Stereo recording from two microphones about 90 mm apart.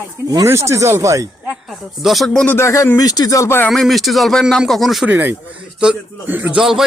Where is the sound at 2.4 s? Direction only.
25° left (ahead or behind).